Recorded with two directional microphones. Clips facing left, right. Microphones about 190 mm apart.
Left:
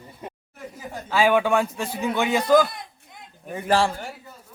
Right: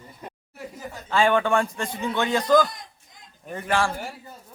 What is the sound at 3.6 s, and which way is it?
Speech, 25° left (ahead or behind).